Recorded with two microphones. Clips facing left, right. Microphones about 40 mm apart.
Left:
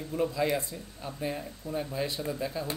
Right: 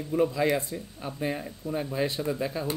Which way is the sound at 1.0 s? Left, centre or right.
Right.